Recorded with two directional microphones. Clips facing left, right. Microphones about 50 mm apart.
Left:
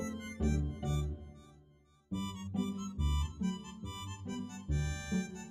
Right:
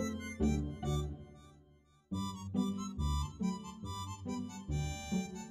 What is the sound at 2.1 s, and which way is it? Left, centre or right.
Music, left.